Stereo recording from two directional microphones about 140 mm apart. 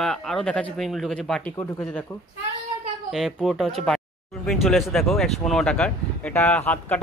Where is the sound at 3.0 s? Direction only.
Centre (ahead or behind).